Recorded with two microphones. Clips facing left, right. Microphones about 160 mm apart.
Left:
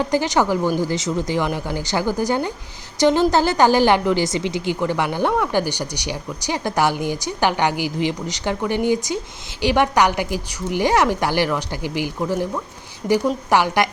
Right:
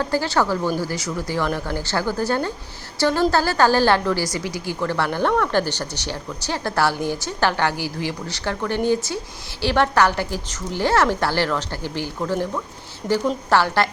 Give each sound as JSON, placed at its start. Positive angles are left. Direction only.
{"t": 0.0, "sound": "a woman's voice", "side_deg": 15}